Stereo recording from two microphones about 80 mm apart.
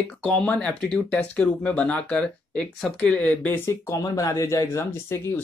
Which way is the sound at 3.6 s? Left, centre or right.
Left.